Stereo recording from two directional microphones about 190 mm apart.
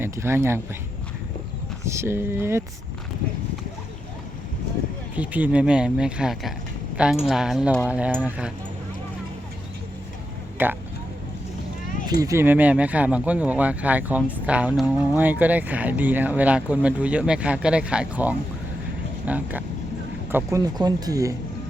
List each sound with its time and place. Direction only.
0.0 s speech: 10° right (ahead or behind)
1.9 s speech: 15° right (ahead or behind)
5.1 s speech: 10° right (ahead or behind)
10.6 s speech: 10° right (ahead or behind)
12.2 s speech: 15° right (ahead or behind)